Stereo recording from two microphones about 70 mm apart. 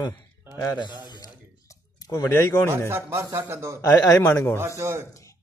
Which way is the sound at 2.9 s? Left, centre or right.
Right.